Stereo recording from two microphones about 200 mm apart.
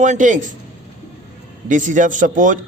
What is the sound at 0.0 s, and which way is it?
Speech, 40° right (ahead or behind).